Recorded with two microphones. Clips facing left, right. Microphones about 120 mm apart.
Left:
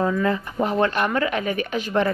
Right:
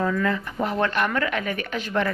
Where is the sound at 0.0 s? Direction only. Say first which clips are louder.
Left 2 dB; 20° left (ahead or behind).